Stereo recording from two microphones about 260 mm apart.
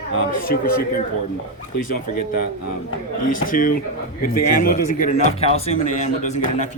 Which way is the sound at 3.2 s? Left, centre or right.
Left.